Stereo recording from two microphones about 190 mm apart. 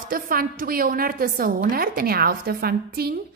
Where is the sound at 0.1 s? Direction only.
50° right (ahead or behind).